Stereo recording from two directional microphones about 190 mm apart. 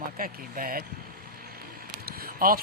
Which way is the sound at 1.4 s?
50° right (ahead or behind).